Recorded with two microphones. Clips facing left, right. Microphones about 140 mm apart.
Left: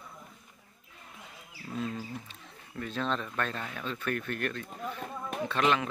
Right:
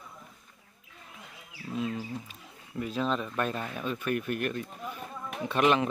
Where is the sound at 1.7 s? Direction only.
5° right (ahead or behind).